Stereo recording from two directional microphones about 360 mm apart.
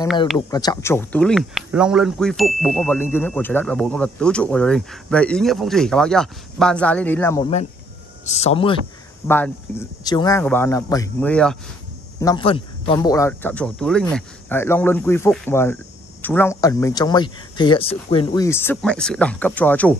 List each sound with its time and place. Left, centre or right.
0.5 s speech: centre